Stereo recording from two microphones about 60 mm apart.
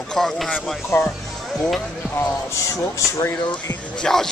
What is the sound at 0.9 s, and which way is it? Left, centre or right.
Speech, left.